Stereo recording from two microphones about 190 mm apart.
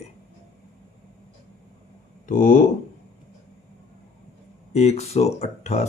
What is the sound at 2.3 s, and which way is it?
Speech, 45° left (ahead or behind).